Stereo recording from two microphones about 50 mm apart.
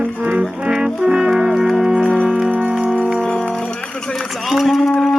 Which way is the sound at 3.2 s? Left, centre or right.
Centre.